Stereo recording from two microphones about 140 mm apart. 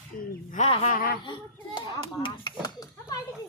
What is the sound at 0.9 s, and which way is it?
Speech, 90° left.